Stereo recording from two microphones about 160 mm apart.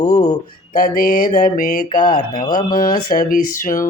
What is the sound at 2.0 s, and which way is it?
Speech, 25° left (ahead or behind).